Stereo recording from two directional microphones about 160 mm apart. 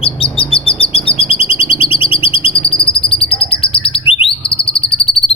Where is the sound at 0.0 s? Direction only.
35° left (ahead or behind).